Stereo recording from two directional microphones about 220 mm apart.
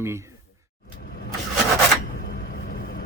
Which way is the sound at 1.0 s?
45° left (ahead or behind).